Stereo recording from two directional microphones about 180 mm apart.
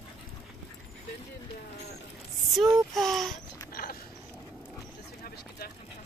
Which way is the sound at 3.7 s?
55° left (ahead or behind).